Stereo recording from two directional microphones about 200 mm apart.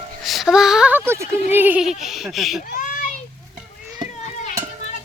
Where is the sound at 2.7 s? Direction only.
40° left (ahead or behind).